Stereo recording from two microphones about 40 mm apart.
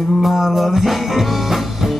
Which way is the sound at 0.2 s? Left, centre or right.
Centre.